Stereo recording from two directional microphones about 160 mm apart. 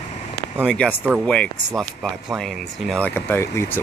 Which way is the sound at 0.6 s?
5° left (ahead or behind).